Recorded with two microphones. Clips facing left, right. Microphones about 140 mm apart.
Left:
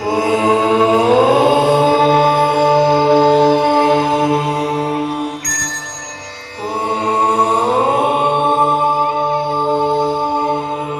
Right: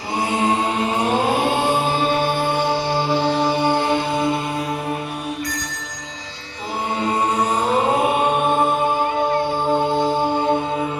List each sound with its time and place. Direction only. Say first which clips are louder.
0.2 s mantra: left 5 dB; 90° left; by 3.8 s 55° left (ahead or behind)
4.0 s music: left 6 dB; 90° left
7.0 s chant: left 5 dB; 65° left (ahead or behind)
7.5 s mantra: left 5 dB; 35° left (ahead or behind)
8.4 s a capella: left 4 dB; 30° left (ahead or behind)